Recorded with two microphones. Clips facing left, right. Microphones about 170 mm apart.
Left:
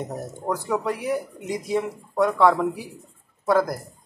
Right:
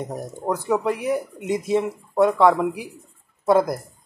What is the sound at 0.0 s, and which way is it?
Speech, 15° right (ahead or behind).